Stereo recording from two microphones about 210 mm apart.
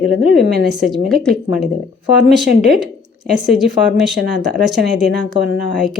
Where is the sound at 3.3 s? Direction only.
Centre (ahead or behind).